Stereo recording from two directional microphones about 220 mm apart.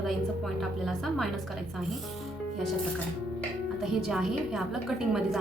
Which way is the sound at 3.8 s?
Centre (ahead or behind).